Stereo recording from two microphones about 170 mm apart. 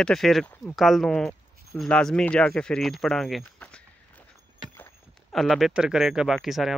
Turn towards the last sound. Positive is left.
turn(degrees=0)  # may be behind; listen again after turning